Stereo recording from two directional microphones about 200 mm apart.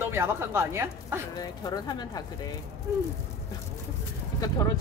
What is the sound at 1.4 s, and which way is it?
Speech, 20° left (ahead or behind).